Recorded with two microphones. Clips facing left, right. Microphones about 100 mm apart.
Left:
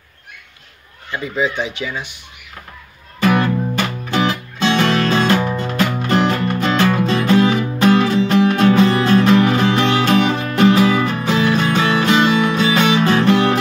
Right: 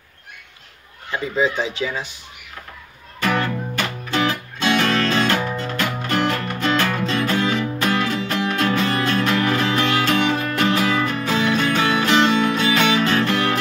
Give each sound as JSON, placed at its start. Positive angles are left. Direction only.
{"t": 1.2, "sound": "speech", "side_deg": -30}
{"t": 3.7, "sound": "music", "side_deg": 15}